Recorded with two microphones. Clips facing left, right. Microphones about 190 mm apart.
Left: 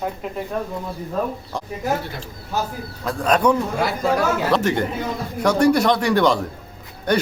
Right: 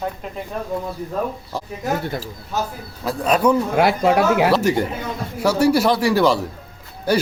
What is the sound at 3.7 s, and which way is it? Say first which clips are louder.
Speech: right 5 dB; 65° right (ahead or behind).